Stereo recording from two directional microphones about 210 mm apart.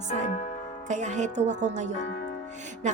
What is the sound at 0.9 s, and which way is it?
Speech, 35° right (ahead or behind).